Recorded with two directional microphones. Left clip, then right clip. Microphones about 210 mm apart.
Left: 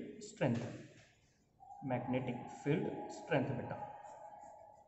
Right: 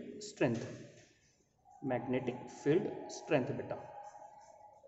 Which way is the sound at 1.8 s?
45° right (ahead or behind).